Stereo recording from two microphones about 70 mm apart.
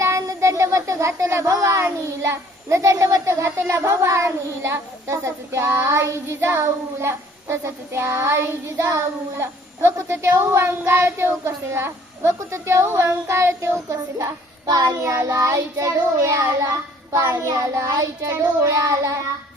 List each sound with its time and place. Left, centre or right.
0.0 s child singing: right
14.7 s child singing: right
15.0 s child singing: right